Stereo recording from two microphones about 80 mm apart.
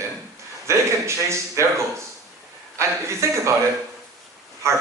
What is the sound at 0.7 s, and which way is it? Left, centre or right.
Speech, right.